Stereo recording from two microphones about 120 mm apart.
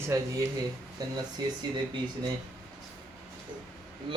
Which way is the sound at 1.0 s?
30° right (ahead or behind).